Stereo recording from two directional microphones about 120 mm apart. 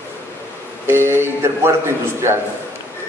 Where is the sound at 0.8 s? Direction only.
20° right (ahead or behind).